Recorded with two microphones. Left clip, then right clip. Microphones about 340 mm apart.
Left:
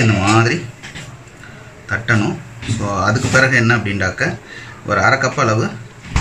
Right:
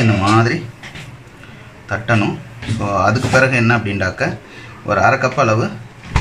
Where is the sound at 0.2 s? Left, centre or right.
Centre.